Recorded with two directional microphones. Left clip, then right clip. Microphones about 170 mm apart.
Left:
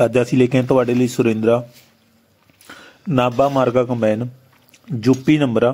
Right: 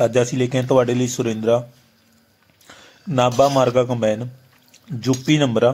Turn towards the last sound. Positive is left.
turn(degrees=15)  # may be behind; listen again after turning